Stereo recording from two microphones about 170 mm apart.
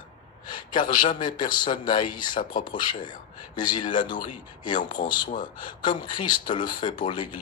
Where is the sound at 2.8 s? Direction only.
25° left (ahead or behind).